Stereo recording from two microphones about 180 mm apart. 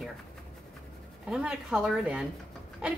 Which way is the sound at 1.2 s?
5° right (ahead or behind).